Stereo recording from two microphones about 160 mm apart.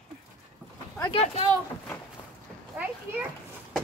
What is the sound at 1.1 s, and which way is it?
Speech, 40° left (ahead or behind).